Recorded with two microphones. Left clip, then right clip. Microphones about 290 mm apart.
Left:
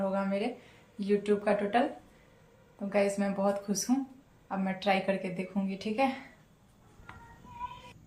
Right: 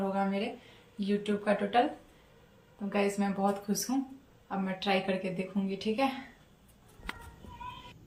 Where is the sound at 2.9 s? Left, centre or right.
Centre.